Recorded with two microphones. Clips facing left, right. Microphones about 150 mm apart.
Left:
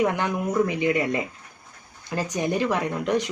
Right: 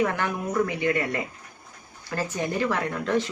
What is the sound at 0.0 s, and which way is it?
Speech, 15° left (ahead or behind).